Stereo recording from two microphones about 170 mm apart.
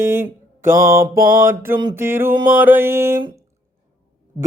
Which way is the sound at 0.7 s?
55° right (ahead or behind).